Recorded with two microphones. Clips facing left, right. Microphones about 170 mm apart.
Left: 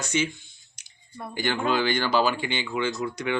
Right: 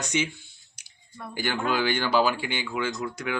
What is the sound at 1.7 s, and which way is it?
Speech, 10° right (ahead or behind).